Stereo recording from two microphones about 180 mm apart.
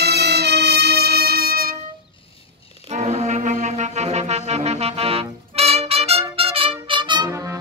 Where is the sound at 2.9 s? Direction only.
40° right (ahead or behind).